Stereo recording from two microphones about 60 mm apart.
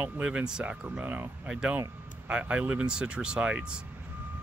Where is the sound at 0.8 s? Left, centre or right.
Right.